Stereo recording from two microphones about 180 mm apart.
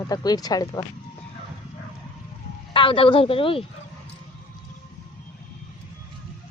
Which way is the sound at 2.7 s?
30° left (ahead or behind).